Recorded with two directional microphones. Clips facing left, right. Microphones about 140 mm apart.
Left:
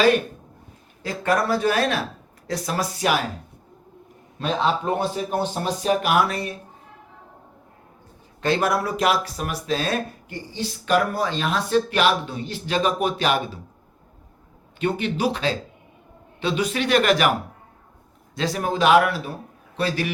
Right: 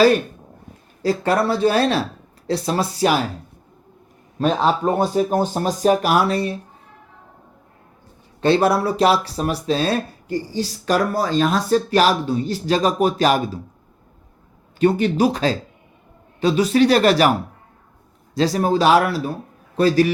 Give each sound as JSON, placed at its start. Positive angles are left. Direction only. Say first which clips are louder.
{"t": 1.0, "sound": "speech", "louder": "right 4 dB", "side_deg": -30}
{"t": 4.4, "sound": "speech", "louder": "right 4 dB", "side_deg": -40}
{"t": 8.4, "sound": "speech", "louder": "right 5 dB", "side_deg": -30}
{"t": 14.8, "sound": "speech", "louder": "right 7 dB", "side_deg": -40}
{"t": 18.3, "sound": "speech", "louder": "right 6 dB", "side_deg": -35}